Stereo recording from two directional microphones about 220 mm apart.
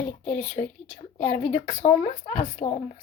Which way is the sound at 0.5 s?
35° left (ahead or behind).